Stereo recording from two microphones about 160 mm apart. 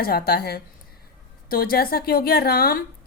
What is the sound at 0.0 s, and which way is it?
Speech, 75° left (ahead or behind).